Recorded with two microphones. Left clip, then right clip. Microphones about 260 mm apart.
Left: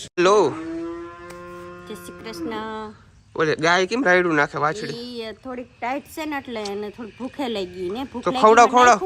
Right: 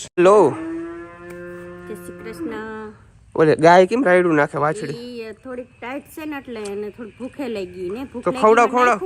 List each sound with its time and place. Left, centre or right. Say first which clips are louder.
0.2 s speech: right 4 dB; centre
3.3 s speech: right 7 dB; centre
5.0 s speech: even; left